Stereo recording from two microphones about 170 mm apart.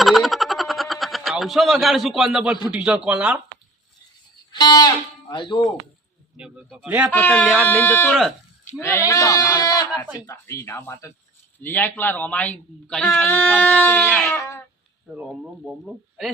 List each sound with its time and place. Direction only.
0.0 s a sound: centre (ahead or behind)
2.6 s speech: 5° right (ahead or behind)
4.5 s a sound: 25° left (ahead or behind)
5.3 s speech: 30° left (ahead or behind)
6.3 s speech: 5° right (ahead or behind)
7.1 s speech: 10° left (ahead or behind)
15.1 s speech: 5° right (ahead or behind)